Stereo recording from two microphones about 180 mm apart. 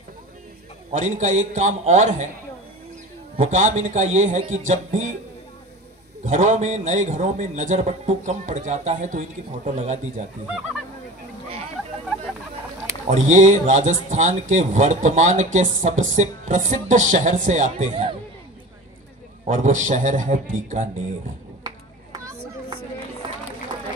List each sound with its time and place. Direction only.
0.9 s a man's voice: 45° right (ahead or behind)
3.3 s a man's voice: 40° right (ahead or behind)
6.2 s a man's voice: 45° right (ahead or behind)
13.0 s a man's voice: 40° right (ahead or behind)
19.4 s a man's voice: 45° right (ahead or behind)
21.6 s a sound: 20° right (ahead or behind)